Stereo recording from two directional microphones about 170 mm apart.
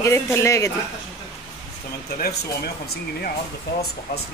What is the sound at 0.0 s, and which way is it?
Speech, 15° left (ahead or behind).